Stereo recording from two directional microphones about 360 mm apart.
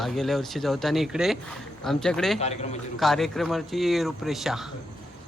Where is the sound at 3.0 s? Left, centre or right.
Centre.